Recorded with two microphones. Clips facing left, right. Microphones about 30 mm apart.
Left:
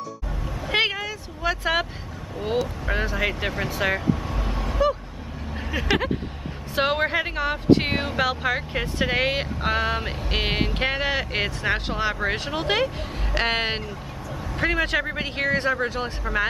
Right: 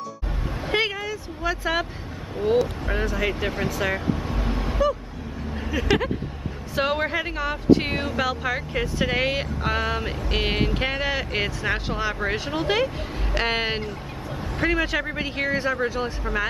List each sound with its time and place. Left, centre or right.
0.7 s vehicle: centre
1.0 s speech: centre
2.9 s speech: centre
4.4 s a sound: centre
5.7 s speech: centre
16.3 s speech: centre